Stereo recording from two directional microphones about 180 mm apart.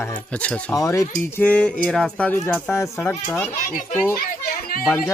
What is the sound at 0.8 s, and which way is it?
Speech, 15° left (ahead or behind).